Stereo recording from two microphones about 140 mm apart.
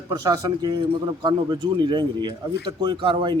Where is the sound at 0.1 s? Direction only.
25° right (ahead or behind).